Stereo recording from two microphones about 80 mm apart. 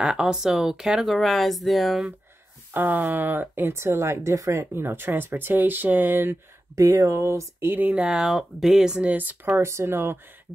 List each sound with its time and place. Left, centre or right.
0.0 s speech: centre
2.7 s speech: right
6.7 s speech: right